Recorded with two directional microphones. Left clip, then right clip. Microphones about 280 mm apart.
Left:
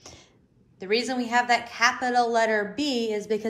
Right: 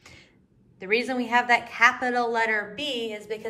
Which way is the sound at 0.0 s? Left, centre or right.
Centre.